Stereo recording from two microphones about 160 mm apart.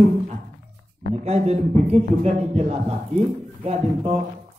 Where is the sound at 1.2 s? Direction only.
45° right (ahead or behind).